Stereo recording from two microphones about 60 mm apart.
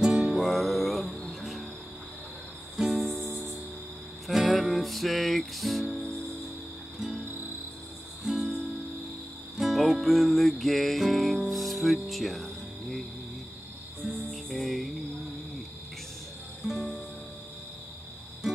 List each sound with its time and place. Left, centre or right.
0.0 s music: centre
0.3 s music: centre
2.8 s music: centre
3.3 s cricket: right
4.3 s music: centre
14.3 s music: centre
16.6 s music: centre